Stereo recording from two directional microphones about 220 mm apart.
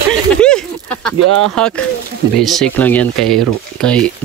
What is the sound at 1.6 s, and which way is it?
Speech, centre (ahead or behind).